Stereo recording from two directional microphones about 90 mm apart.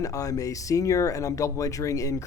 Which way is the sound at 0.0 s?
40° left (ahead or behind).